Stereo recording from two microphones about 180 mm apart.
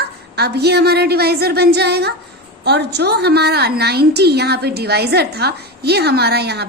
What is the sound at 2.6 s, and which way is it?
A woman's voice, 65° right (ahead or behind).